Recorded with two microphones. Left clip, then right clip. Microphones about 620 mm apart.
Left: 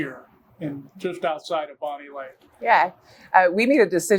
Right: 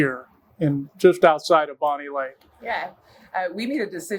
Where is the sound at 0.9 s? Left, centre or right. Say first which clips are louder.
Right 11 dB; right.